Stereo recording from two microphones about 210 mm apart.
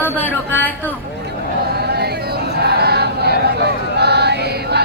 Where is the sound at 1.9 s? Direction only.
50° right (ahead or behind).